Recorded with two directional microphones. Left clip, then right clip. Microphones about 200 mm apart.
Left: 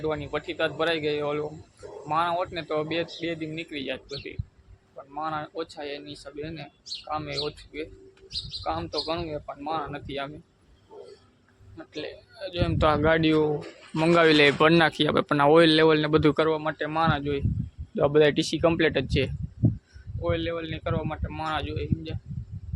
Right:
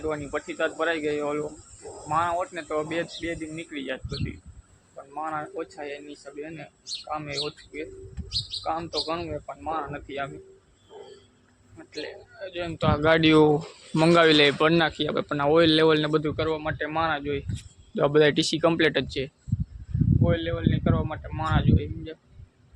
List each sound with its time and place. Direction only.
0.0 s speech: 10° left (ahead or behind)
8.6 s speech: 10° left (ahead or behind)
11.9 s a man's voice: 15° left (ahead or behind)
12.7 s speech: 45° left (ahead or behind)
13.0 s speech: centre (ahead or behind)
13.2 s speech: 20° right (ahead or behind)
14.0 s speech: centre (ahead or behind)
16.2 s speech: 50° left (ahead or behind)
16.5 s speech: 20° left (ahead or behind)
17.9 s speech: centre (ahead or behind)
20.2 s speech: 5° left (ahead or behind)